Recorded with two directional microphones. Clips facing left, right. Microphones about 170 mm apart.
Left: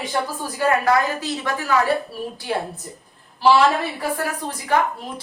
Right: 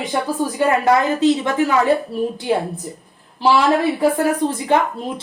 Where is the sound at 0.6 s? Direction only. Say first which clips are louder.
Right 2 dB; 25° right (ahead or behind).